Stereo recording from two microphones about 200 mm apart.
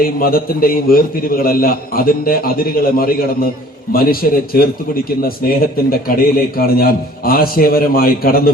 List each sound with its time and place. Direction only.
0.0 s a man's voice: 45° left (ahead or behind)